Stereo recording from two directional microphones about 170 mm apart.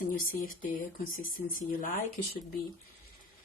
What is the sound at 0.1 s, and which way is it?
Speech, 55° left (ahead or behind).